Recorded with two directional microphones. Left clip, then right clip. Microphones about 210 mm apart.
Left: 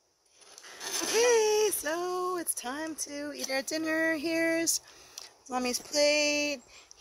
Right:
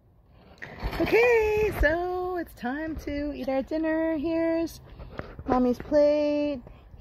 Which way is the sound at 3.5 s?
65° left (ahead or behind).